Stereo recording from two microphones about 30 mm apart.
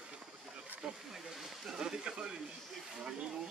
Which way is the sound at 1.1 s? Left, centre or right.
Centre.